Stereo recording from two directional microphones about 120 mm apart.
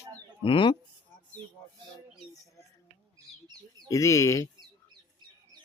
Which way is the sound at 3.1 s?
35° right (ahead or behind).